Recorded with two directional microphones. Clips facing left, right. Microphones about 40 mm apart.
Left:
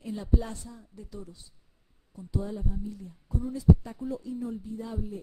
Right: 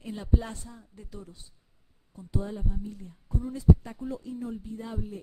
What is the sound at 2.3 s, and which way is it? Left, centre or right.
A woman's voice, right.